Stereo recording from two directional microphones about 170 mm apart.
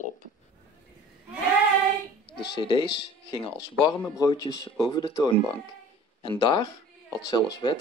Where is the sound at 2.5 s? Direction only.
30° left (ahead or behind).